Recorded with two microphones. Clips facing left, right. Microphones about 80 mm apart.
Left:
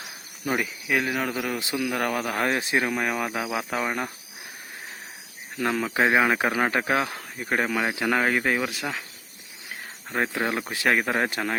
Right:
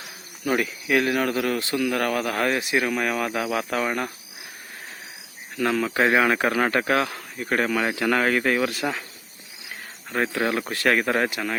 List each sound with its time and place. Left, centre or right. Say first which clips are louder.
0.4 s speech: right 3 dB; centre
2.5 s speech: right 1 dB; left
2.9 s speech: right 2 dB; centre
5.5 s speech: right 2 dB; centre
7.1 s insect: right 1 dB; left
7.5 s speech: right 2 dB; centre
10.1 s speech: right 2 dB; centre
11.3 s speech: even; left